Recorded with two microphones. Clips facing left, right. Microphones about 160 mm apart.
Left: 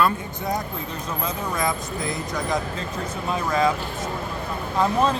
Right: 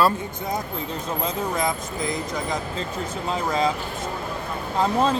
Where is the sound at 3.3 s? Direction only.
25° right (ahead or behind).